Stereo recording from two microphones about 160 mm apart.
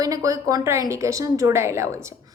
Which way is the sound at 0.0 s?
20° right (ahead or behind).